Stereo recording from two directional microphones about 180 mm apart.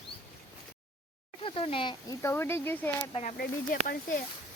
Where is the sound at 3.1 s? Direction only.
35° left (ahead or behind).